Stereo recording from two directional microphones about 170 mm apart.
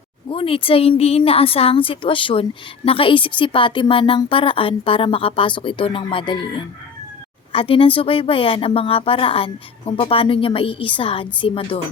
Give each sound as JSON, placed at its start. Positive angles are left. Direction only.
{"t": 0.3, "sound": "a woman's voice", "side_deg": 30}